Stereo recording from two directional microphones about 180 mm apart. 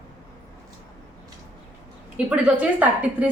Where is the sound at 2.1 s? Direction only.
5° right (ahead or behind).